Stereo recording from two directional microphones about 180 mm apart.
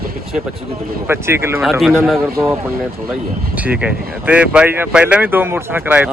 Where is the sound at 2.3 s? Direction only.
15° right (ahead or behind).